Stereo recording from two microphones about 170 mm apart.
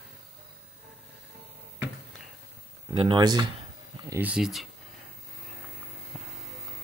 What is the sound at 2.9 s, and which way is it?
Speech, 30° right (ahead or behind).